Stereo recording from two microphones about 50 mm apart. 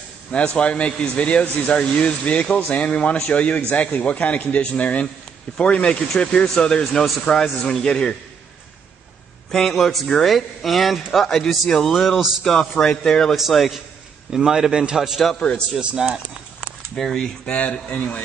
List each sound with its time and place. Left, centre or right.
0.6 s speech: left
9.5 s a man's voice: centre
13.3 s a man's voice: centre
14.3 s a man's voice: centre
17.0 s speech: centre
17.5 s speech: left